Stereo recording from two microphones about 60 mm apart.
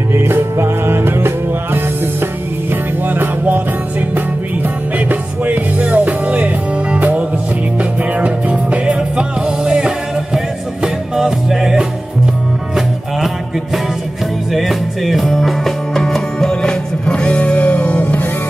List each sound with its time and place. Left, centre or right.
0.1 s music: right
4.9 s music: right; by 11.8 s centre
14.5 s music: centre; by 18.3 s left